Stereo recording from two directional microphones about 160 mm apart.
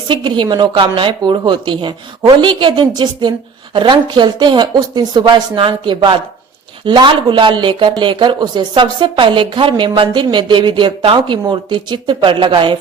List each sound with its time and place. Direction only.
0.1 s speech: 30° right (ahead or behind)